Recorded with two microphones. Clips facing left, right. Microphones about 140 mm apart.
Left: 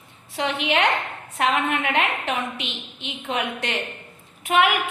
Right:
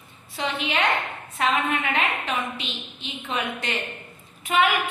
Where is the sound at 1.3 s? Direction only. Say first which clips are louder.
Left 2 dB; 65° left (ahead or behind).